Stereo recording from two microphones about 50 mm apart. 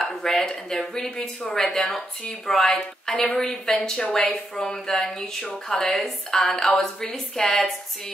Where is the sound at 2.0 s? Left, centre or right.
Centre.